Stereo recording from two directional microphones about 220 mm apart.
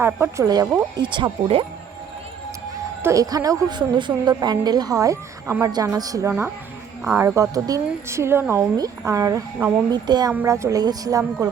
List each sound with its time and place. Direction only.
0.0 s speech: 10° right (ahead or behind)
1.0 s speech: 20° right (ahead or behind)
3.0 s speech: 15° right (ahead or behind)